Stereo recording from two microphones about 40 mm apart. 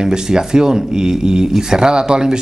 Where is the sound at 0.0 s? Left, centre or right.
Centre.